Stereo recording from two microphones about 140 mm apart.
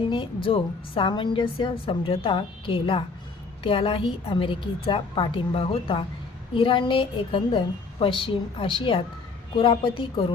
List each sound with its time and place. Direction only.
0.1 s a woman's voice: 35° left (ahead or behind)